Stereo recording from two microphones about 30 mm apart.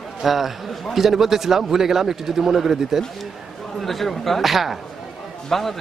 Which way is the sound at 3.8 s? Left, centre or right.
Centre.